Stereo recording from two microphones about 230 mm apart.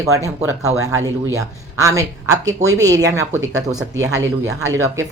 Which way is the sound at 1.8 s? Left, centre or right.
Centre.